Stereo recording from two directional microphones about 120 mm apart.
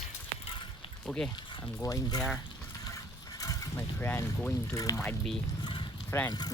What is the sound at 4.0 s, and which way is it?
Speech, 15° left (ahead or behind).